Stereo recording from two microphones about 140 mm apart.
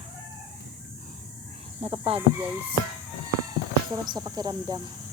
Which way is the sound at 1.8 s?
45° right (ahead or behind).